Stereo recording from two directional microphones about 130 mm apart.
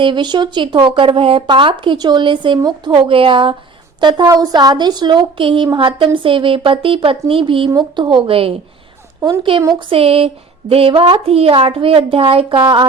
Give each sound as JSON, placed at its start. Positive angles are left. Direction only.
{"t": 0.0, "sound": "a woman's voice", "side_deg": -35}
{"t": 4.0, "sound": "a woman's voice", "side_deg": -30}